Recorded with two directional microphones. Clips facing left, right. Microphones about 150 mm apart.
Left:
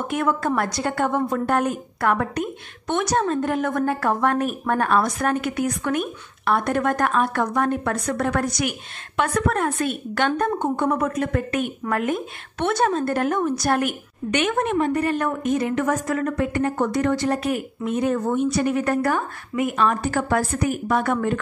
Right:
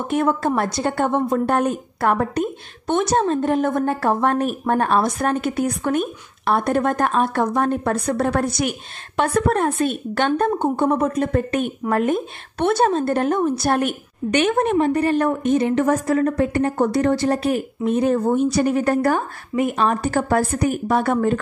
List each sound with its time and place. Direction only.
0.1 s a woman's voice: 30° right (ahead or behind)